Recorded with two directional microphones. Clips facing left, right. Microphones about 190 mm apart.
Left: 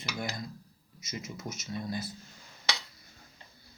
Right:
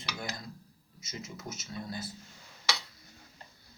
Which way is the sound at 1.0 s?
20° left (ahead or behind).